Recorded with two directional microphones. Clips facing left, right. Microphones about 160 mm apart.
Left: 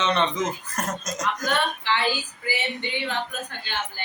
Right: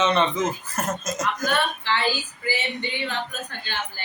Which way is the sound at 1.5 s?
15° left (ahead or behind).